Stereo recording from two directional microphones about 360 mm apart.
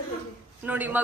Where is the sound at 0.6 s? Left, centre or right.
Centre.